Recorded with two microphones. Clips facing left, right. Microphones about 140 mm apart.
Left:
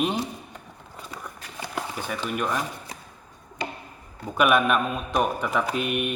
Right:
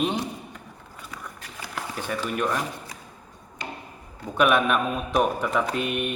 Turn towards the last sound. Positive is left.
turn(degrees=5)  # may be behind; listen again after turning